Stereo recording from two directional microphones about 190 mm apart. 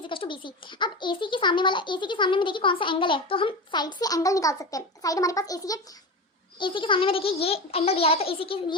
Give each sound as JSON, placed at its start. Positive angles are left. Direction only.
{"t": 0.1, "sound": "a child's voice", "side_deg": 25}